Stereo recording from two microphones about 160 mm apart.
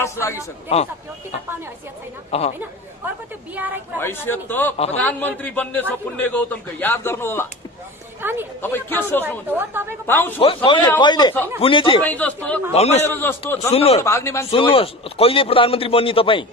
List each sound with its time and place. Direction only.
0.0 s a man's voice: 15° left (ahead or behind)
2.3 s a man's voice: 40° left (ahead or behind)
4.0 s a man's voice: 15° left (ahead or behind)
8.2 s a woman's voice: 15° right (ahead or behind)
8.6 s a man's voice: 15° left (ahead or behind)
9.5 s a woman's voice: 15° right (ahead or behind)
10.0 s a man's voice: 10° left (ahead or behind)
10.4 s a man's voice: 30° left (ahead or behind)
12.0 s a man's voice: 10° left (ahead or behind)
12.7 s a man's voice: 40° left (ahead or behind)
13.0 s a man's voice: 15° left (ahead or behind)
13.7 s a man's voice: 40° left (ahead or behind)
14.0 s a man's voice: 20° left (ahead or behind)
14.5 s a man's voice: 35° left (ahead or behind)